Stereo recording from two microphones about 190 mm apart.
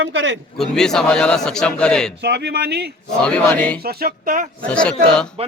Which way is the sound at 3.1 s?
5° left (ahead or behind).